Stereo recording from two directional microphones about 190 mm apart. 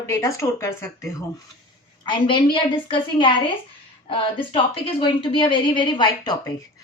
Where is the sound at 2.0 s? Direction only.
25° left (ahead or behind).